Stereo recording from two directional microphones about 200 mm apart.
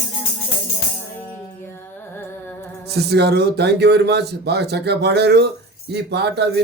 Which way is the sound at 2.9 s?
55° right (ahead or behind).